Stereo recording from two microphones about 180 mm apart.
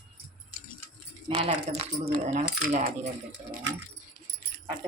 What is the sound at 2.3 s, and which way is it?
Speech, 45° right (ahead or behind).